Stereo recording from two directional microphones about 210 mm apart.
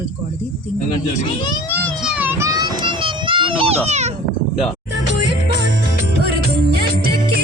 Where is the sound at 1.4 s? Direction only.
10° left (ahead or behind).